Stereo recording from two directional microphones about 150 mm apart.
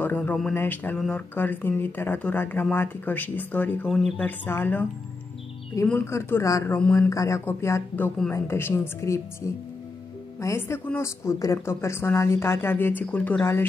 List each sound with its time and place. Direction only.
0.0 s speech: 10° left (ahead or behind)
4.5 s speech: 15° left (ahead or behind)
5.9 s speech: 15° left (ahead or behind)
7.1 s speech: 20° left (ahead or behind)